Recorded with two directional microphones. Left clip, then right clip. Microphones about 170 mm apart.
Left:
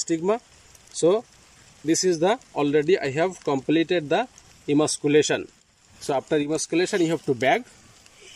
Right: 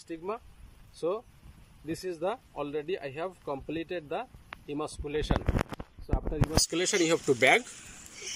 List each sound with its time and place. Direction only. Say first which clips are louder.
0.0 s speech: left 13 dB; 25° left (ahead or behind)